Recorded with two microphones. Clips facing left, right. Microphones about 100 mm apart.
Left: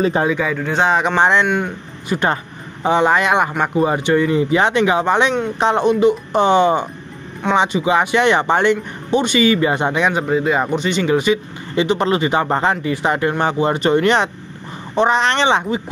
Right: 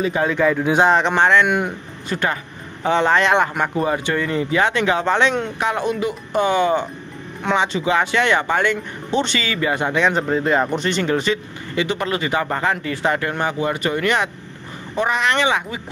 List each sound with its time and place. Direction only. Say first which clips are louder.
0.3 s speech: right 2 dB; centre (ahead or behind)
1.1 s speech: left 1 dB; 20° left (ahead or behind)
1.4 s speech: even; 5° right (ahead or behind)
2.1 s speech: left 4 dB; 15° left (ahead or behind)
11.7 s speech: left 5 dB; 25° left (ahead or behind)